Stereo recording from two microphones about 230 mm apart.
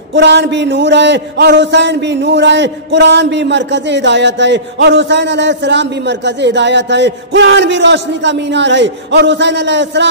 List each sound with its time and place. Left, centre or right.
0.1 s speech: right